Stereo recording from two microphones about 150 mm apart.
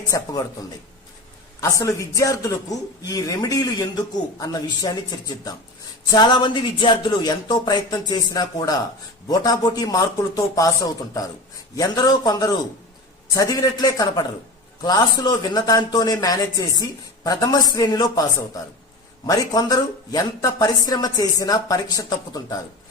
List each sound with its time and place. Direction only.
0.1 s speech: 25° left (ahead or behind)
1.7 s speech: 20° left (ahead or behind)